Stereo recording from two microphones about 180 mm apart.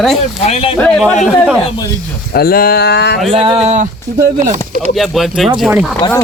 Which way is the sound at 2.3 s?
55° left (ahead or behind).